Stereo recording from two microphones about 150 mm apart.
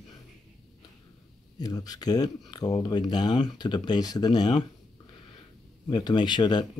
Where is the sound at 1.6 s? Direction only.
25° left (ahead or behind).